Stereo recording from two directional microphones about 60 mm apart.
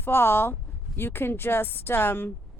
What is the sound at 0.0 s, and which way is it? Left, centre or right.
A woman's voice, left.